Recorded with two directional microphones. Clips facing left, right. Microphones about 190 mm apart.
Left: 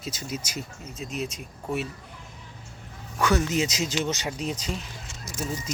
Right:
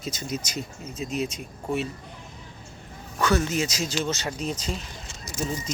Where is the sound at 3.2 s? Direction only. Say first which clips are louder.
Even; 15° left (ahead or behind).